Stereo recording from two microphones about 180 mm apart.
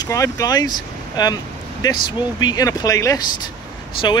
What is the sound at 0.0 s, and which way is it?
Speech, 20° left (ahead or behind).